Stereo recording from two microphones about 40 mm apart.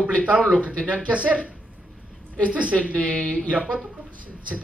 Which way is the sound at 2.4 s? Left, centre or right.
Right.